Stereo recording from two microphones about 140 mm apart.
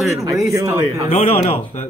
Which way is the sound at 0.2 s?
20° right (ahead or behind).